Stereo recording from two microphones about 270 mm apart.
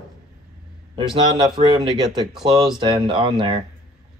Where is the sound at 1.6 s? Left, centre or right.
Right.